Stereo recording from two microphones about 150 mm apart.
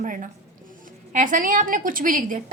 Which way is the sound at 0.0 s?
60° right (ahead or behind).